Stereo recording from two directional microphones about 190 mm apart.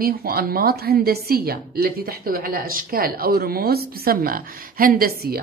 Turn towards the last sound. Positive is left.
turn(degrees=-50)  # may be behind; listen again after turning